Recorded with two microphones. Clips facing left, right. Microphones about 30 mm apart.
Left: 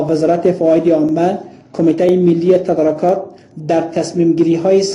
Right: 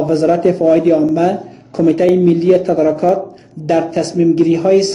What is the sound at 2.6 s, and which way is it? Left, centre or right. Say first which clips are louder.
Speech: right 1 dB; right.